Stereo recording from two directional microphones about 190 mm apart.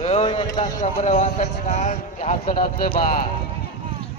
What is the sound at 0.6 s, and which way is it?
A man's voice, 40° left (ahead or behind).